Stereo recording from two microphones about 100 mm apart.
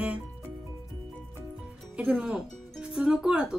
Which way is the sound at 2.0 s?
10° right (ahead or behind).